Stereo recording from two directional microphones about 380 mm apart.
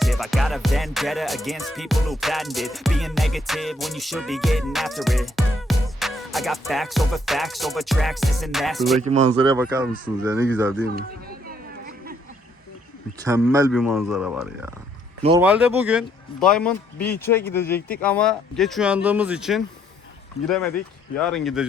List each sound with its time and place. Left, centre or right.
0.0 s music: centre
9.0 s speech: centre
10.8 s a sound: right
13.2 s music: centre